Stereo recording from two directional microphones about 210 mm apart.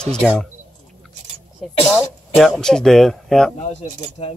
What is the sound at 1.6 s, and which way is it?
Speech, centre (ahead or behind).